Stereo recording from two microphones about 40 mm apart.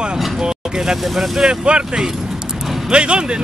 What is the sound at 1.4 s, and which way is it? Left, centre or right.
Speech, right.